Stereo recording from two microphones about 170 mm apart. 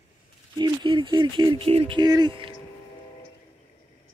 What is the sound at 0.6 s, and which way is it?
Speech, 30° right (ahead or behind).